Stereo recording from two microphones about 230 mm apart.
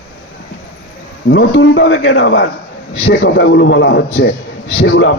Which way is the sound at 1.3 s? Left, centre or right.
Left.